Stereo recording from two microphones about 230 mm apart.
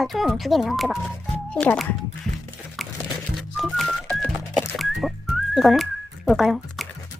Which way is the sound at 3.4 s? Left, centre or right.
Centre.